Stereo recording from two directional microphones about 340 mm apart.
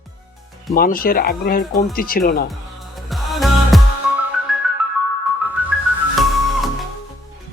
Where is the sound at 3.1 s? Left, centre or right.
Centre.